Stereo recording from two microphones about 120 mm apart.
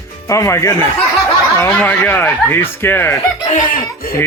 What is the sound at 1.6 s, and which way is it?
Speech, 15° left (ahead or behind).